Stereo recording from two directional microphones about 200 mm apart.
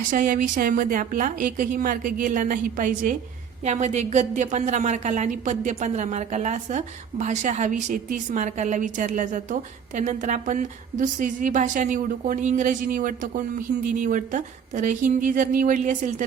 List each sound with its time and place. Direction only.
0.1 s a woman's voice: 40° right (ahead or behind)